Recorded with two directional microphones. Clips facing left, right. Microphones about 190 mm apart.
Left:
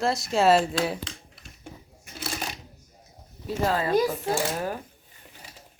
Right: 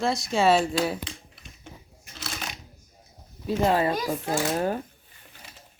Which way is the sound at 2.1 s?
5° left (ahead or behind).